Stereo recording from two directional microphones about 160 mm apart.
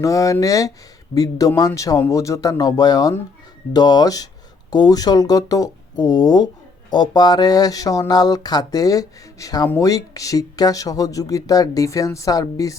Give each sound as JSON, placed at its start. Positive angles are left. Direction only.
{"t": 0.0, "sound": "speech", "side_deg": 20}